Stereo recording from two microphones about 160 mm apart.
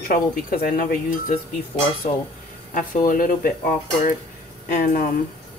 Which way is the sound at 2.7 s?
60° left (ahead or behind).